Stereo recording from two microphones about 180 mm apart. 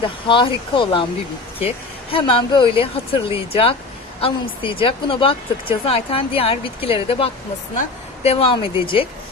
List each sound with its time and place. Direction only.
0.0 s speech: 30° left (ahead or behind)